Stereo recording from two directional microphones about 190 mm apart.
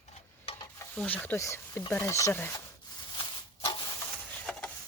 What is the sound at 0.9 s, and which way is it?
Speech, 5° left (ahead or behind).